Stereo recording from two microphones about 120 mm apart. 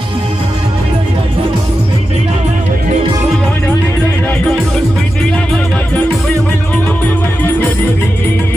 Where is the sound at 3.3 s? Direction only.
15° left (ahead or behind).